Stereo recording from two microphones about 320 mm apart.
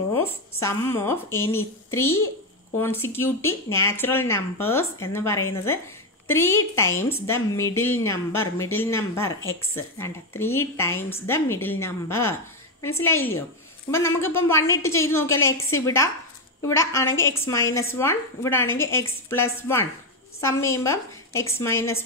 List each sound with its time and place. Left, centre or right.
0.1 s speech: centre
2.0 s a child's voice: left
2.8 s speech: centre